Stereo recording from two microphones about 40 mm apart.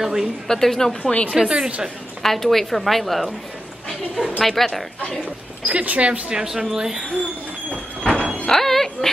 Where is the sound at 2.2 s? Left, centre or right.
Centre.